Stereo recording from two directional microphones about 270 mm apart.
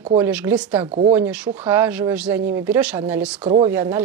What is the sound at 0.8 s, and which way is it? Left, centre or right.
Speech, right.